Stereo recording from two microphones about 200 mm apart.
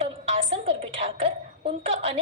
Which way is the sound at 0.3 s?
30° right (ahead or behind).